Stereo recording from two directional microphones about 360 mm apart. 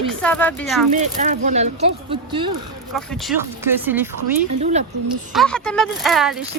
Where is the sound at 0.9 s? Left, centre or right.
Centre.